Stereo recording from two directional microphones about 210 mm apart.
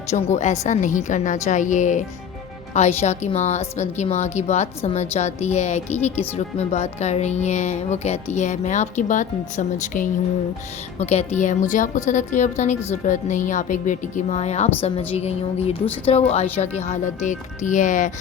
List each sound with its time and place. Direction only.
0.1 s a woman's voice: 35° left (ahead or behind)